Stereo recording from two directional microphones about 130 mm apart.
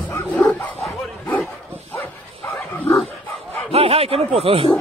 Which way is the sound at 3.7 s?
50° right (ahead or behind).